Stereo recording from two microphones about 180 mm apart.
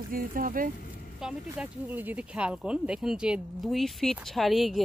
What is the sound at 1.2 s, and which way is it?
Speech, 10° right (ahead or behind).